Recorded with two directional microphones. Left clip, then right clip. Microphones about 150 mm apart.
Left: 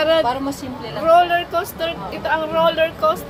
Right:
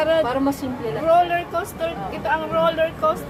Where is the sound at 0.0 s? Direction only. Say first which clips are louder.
Left 2 dB; 35° left (ahead or behind).